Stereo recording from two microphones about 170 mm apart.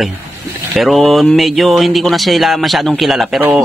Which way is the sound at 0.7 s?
Centre (ahead or behind).